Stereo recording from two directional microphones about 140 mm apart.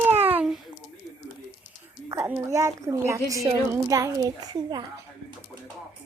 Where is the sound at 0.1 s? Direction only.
45° right (ahead or behind).